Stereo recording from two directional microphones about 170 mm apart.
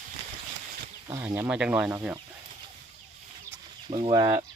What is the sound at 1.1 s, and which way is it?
Speech, 15° right (ahead or behind).